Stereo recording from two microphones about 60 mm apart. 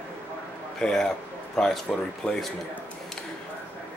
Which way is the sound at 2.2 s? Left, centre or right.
Left.